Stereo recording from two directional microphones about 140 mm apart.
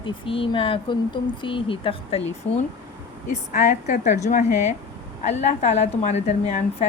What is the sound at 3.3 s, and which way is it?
A woman's voice, 60° left (ahead or behind).